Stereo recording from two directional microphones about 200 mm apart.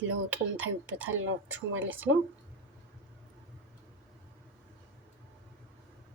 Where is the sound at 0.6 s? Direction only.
10° right (ahead or behind).